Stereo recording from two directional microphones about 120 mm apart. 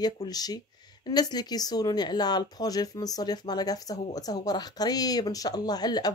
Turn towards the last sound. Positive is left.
turn(degrees=35)  # may be behind; listen again after turning